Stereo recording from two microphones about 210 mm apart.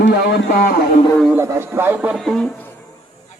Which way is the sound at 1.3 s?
10° right (ahead or behind).